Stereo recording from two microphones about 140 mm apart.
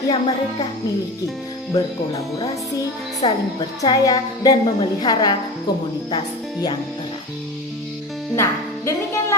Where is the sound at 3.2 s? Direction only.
40° left (ahead or behind).